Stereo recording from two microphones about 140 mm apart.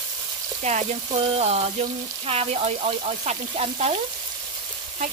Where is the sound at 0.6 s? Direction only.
50° right (ahead or behind).